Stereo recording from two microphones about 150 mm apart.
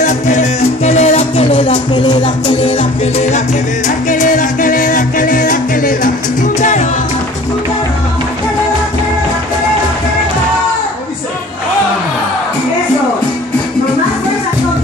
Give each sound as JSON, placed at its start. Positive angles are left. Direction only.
{"t": 0.0, "sound": "music", "side_deg": 50}
{"t": 2.8, "sound": "music", "side_deg": 45}